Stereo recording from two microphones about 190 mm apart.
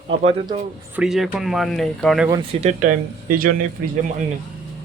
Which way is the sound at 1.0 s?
Centre (ahead or behind).